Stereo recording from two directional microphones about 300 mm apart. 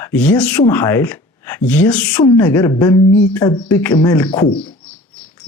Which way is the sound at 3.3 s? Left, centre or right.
Centre.